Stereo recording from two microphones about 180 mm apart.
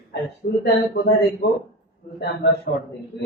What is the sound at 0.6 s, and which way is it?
A man's voice, 65° left (ahead or behind).